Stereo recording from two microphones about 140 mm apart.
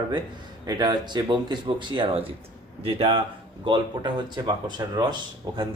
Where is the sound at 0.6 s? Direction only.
30° right (ahead or behind).